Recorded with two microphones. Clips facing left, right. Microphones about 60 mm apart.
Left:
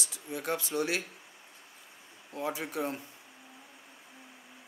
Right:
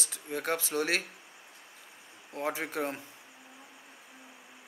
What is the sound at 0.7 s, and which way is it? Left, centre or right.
Speech, right.